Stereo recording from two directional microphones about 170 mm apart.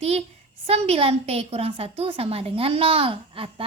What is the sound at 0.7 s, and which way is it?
A woman's voice, 35° right (ahead or behind).